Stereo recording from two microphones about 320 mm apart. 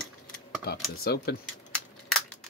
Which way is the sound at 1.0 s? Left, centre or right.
Left.